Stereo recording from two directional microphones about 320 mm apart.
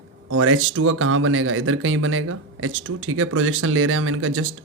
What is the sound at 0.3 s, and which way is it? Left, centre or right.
Speech, right.